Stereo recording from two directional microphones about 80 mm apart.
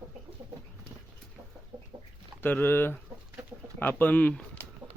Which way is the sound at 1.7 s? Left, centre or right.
Right.